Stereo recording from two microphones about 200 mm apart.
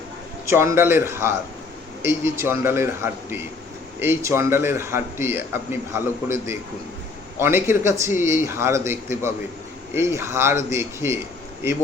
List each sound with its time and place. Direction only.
0.4 s a man's voice: 15° right (ahead or behind)